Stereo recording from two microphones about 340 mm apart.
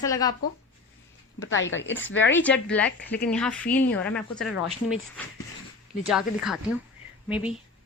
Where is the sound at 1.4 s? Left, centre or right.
Left.